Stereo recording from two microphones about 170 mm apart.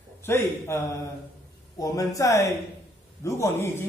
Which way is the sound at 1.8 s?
20° left (ahead or behind).